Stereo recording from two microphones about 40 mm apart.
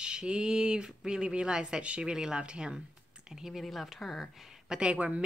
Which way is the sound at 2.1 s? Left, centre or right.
Centre.